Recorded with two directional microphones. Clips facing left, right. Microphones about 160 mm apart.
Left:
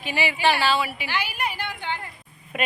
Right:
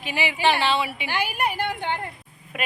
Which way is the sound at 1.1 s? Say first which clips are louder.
Right 5 dB; 50° right (ahead or behind).